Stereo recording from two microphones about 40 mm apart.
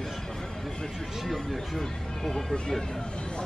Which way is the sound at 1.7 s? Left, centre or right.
Centre.